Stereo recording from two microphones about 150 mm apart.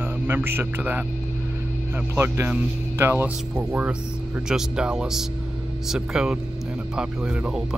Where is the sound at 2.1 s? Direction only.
15° right (ahead or behind).